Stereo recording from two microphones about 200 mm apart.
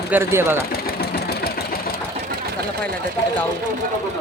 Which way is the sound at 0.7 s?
50° left (ahead or behind).